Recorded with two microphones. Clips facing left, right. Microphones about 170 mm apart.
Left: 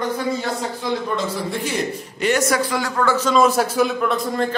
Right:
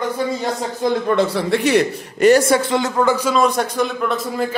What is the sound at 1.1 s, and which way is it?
A man's voice, 65° right (ahead or behind).